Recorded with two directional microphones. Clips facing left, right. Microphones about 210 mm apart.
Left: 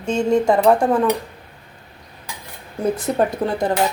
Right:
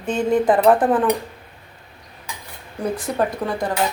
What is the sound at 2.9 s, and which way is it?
Speech, 25° left (ahead or behind).